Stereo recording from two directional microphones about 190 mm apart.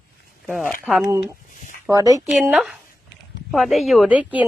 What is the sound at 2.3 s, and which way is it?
Speech, 5° right (ahead or behind).